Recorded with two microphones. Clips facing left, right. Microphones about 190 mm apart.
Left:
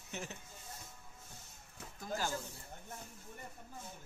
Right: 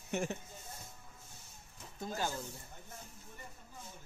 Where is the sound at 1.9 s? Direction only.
25° right (ahead or behind).